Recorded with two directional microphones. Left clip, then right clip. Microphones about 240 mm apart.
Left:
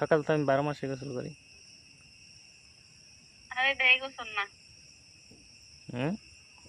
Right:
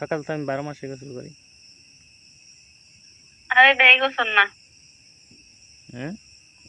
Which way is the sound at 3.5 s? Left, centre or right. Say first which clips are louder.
Right 12 dB; right.